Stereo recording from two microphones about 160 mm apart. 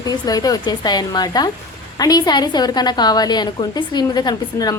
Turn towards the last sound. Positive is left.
turn(degrees=25)  # may be behind; listen again after turning